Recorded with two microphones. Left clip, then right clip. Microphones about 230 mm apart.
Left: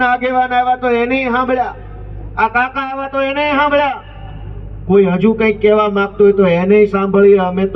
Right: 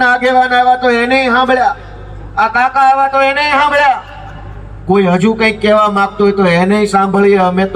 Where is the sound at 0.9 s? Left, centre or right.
Right.